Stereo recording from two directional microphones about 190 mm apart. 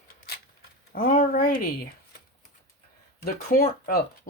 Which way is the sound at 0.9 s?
50° left (ahead or behind).